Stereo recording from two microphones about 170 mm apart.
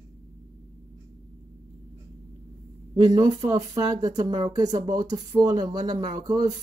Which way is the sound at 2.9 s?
25° right (ahead or behind).